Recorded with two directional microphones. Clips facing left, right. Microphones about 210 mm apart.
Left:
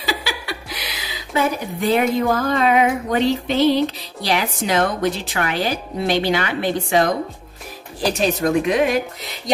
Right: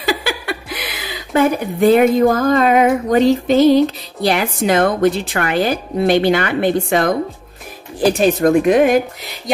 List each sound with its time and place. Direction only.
0.0 s speech: 50° right (ahead or behind)